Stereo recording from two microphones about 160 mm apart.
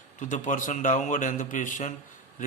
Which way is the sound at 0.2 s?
50° left (ahead or behind).